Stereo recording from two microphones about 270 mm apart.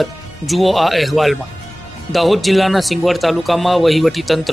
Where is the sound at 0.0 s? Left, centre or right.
Centre.